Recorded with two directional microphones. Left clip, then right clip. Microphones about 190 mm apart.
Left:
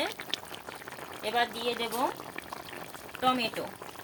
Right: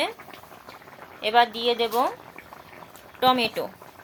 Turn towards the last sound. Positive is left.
turn(degrees=-30)  # may be behind; listen again after turning